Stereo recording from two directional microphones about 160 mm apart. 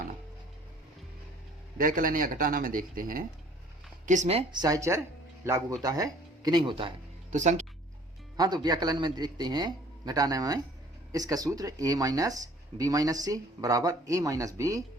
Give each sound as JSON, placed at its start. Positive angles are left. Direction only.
{"t": 1.8, "sound": "speech", "side_deg": -60}
{"t": 4.0, "sound": "speech", "side_deg": -50}
{"t": 4.6, "sound": "speech", "side_deg": -20}
{"t": 7.3, "sound": "speech", "side_deg": -50}
{"t": 8.4, "sound": "speech", "side_deg": -25}